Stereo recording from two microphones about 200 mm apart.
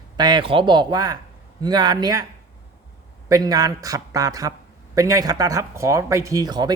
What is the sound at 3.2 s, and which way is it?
A man's voice, 20° right (ahead or behind).